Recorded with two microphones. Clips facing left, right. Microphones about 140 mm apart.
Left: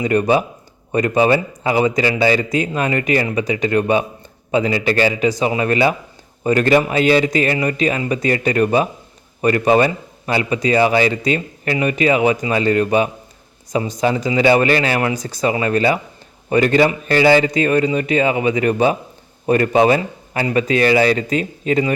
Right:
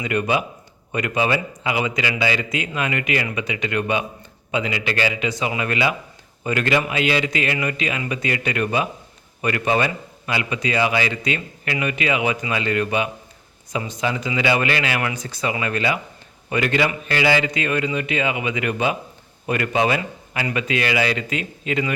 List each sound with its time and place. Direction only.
0.0 s a man's voice: 35° left (ahead or behind)